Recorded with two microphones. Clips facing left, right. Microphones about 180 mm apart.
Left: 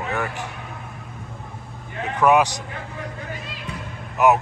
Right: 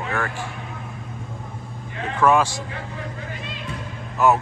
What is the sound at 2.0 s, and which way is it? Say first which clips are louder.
Speech: left 1 dB; 20° left (ahead or behind).